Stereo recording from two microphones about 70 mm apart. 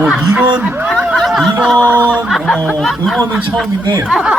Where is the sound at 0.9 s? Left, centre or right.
Centre.